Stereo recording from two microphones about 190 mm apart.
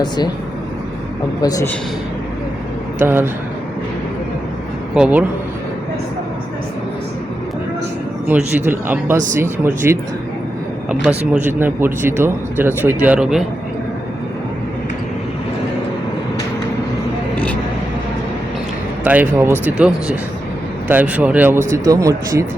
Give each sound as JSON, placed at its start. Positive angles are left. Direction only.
{"t": 1.4, "sound": "a man's voice", "side_deg": 20}
{"t": 3.0, "sound": "speech", "side_deg": -10}
{"t": 4.9, "sound": "speech", "side_deg": -5}
{"t": 8.3, "sound": "speech", "side_deg": -10}
{"t": 11.6, "sound": "speech", "side_deg": -10}
{"t": 19.0, "sound": "speech", "side_deg": -10}